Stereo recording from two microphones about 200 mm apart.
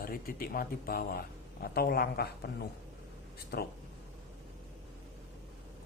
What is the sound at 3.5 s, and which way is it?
Speech, 50° left (ahead or behind).